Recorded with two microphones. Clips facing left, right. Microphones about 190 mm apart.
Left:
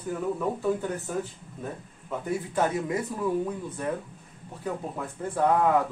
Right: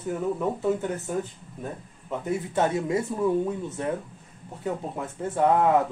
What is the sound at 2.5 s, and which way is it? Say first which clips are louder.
Speech: right 3 dB; 25° right (ahead or behind).